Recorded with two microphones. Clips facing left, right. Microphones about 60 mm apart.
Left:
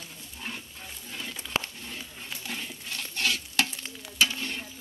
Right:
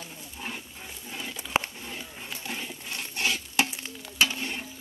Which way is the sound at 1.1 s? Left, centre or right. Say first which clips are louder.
Right 3 dB; centre.